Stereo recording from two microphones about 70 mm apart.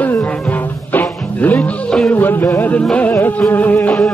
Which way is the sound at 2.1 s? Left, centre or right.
Left.